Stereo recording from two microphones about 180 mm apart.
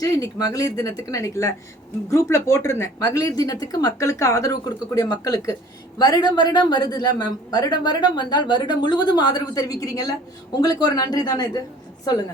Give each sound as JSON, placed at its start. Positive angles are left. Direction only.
{"t": 0.0, "sound": "a woman's voice", "side_deg": 20}